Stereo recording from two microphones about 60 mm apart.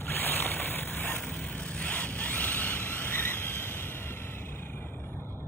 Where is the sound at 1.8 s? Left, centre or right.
Left.